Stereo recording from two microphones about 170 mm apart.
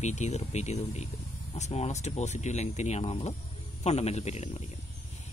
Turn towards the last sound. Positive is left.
turn(degrees=40)  # may be behind; listen again after turning